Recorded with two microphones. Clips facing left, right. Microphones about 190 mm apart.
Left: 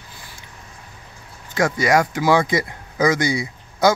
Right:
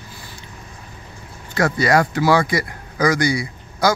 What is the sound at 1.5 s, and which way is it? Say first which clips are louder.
Speech: right 1 dB; 15° left (ahead or behind).